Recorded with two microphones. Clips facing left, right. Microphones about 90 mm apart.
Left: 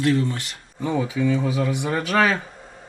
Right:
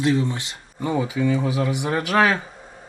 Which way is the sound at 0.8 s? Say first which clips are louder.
Even; 5° right (ahead or behind).